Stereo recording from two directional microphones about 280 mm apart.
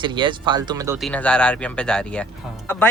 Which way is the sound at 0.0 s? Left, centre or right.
Centre.